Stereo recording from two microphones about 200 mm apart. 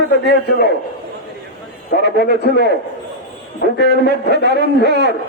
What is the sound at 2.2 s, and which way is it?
A man's voice, 50° left (ahead or behind).